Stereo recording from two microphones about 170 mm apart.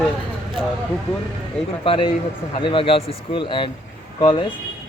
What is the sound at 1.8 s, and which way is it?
Speech, 30° left (ahead or behind).